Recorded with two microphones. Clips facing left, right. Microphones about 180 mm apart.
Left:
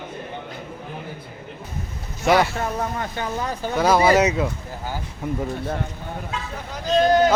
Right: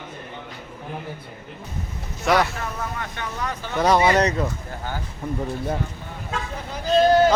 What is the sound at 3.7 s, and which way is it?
A man's voice, centre (ahead or behind).